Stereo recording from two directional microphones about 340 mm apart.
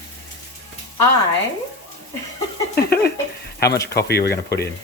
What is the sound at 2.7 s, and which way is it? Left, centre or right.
Speech, left.